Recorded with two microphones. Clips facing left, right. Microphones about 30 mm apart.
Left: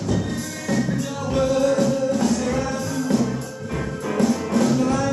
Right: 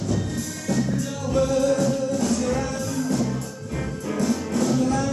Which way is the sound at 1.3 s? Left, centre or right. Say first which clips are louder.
Left 1 dB; left.